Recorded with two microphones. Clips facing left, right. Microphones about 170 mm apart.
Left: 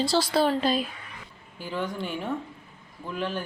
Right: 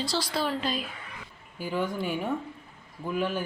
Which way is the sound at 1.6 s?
5° right (ahead or behind).